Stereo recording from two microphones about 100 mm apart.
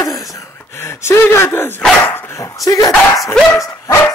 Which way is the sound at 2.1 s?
20° left (ahead or behind).